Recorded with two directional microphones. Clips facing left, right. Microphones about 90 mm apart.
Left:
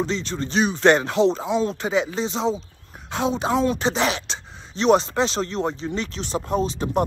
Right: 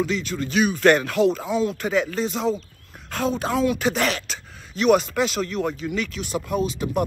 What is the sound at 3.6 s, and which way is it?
Speech, 30° left (ahead or behind).